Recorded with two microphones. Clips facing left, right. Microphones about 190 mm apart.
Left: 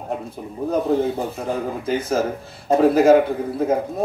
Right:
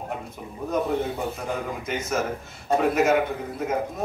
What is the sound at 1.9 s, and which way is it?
Speech, 30° left (ahead or behind).